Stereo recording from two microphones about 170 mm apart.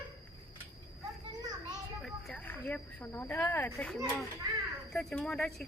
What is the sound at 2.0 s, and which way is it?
Speech, 10° left (ahead or behind).